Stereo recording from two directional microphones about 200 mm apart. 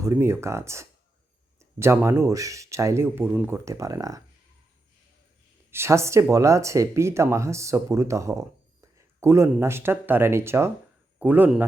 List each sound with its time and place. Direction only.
0.0 s speech: 15° right (ahead or behind)
5.7 s speech: 15° right (ahead or behind)